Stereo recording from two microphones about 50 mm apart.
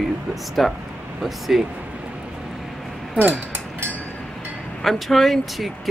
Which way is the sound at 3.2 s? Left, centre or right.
Right.